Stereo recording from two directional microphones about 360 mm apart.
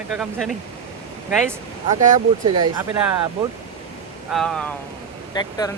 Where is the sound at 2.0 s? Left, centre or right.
Centre.